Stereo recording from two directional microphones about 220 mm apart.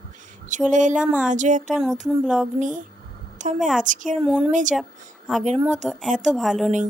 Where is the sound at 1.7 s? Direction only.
Centre (ahead or behind).